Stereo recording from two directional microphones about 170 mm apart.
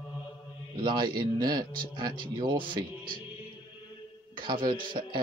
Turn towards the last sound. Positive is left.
turn(degrees=-25)  # may be behind; listen again after turning